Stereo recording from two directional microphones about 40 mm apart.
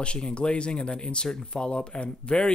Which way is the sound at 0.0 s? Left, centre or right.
Left.